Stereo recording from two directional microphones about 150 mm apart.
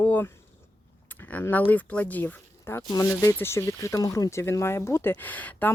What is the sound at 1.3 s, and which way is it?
Speech, 10° left (ahead or behind).